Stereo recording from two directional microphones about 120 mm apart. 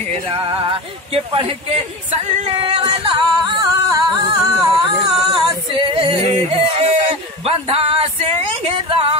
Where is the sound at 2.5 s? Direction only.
50° right (ahead or behind).